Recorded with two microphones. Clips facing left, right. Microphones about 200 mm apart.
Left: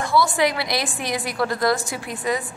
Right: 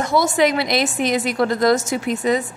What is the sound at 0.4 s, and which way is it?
A woman's voice, 20° right (ahead or behind).